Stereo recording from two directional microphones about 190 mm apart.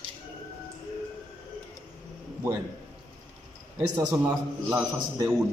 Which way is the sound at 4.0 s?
15° right (ahead or behind).